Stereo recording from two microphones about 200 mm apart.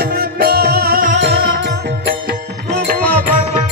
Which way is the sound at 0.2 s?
50° right (ahead or behind).